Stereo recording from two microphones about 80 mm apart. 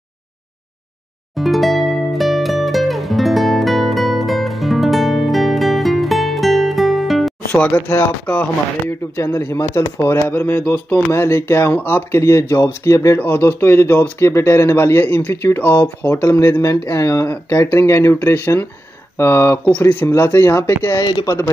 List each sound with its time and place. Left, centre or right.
1.3 s music: centre
7.5 s speech: centre; by 9.8 s left
10.1 s speech: left
13.2 s speech: left
21.0 s speech: left